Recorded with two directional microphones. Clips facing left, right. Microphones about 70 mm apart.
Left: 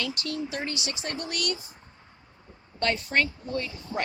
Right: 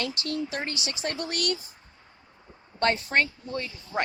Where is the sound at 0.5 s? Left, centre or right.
Right.